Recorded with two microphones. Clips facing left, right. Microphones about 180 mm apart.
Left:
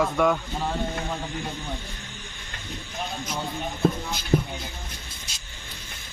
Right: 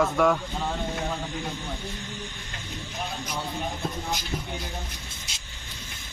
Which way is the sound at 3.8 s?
55° left (ahead or behind).